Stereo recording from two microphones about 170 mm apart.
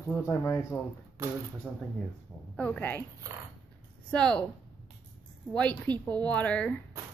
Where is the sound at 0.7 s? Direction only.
5° left (ahead or behind).